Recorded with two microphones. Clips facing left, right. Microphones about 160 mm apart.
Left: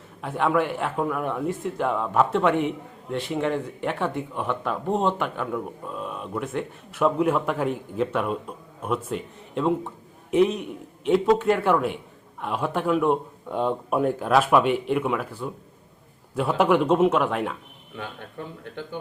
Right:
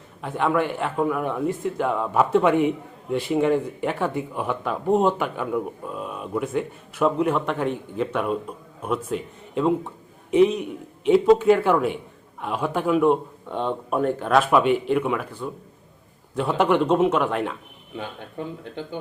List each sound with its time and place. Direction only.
0.2 s speech: centre (ahead or behind)
17.9 s speech: 15° right (ahead or behind)